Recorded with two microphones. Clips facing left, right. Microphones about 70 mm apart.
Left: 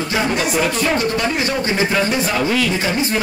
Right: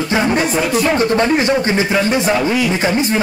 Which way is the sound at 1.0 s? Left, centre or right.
Right.